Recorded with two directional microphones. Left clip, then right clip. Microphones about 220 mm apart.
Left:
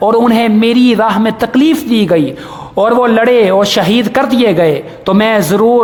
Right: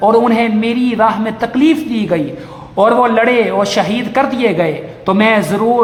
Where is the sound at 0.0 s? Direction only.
40° left (ahead or behind).